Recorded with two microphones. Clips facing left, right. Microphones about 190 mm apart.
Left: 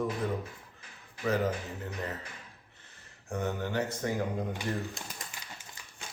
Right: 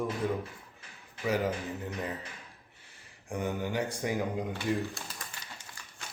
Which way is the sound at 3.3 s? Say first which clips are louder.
Even; 10° right (ahead or behind).